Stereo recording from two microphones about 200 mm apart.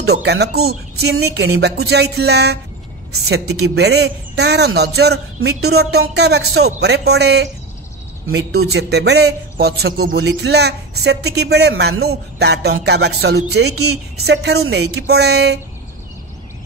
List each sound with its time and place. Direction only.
0.0 s a woman's voice: 55° right (ahead or behind)